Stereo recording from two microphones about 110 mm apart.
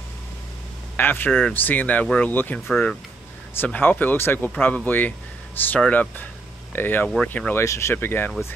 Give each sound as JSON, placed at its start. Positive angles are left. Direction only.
{"t": 0.9, "sound": "speech", "side_deg": 20}
{"t": 7.6, "sound": "speech", "side_deg": 25}